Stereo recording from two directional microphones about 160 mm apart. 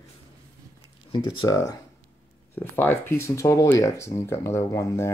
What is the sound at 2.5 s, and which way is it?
Speech, 15° left (ahead or behind).